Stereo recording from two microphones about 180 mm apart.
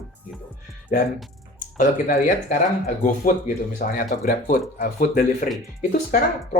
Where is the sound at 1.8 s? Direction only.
45° left (ahead or behind).